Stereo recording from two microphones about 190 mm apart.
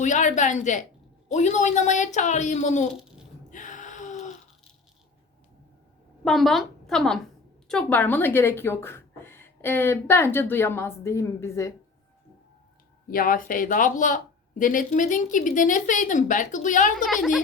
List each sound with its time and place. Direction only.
0.0 s speech: 40° left (ahead or behind)
3.5 s a sound: 40° left (ahead or behind)
6.2 s a woman's voice: centre (ahead or behind)
13.1 s a woman's voice: 50° left (ahead or behind)
17.0 s a woman's voice: centre (ahead or behind)